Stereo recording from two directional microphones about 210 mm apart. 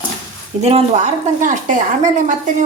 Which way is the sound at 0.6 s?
30° right (ahead or behind).